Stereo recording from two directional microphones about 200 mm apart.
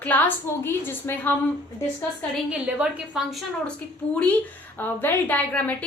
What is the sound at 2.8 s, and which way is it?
A woman's voice, 5° right (ahead or behind).